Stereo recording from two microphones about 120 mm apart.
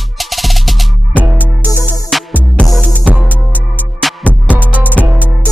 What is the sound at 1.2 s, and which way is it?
Music, 15° right (ahead or behind).